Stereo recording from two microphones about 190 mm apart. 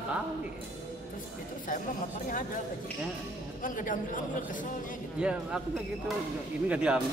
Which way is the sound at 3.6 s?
45° left (ahead or behind).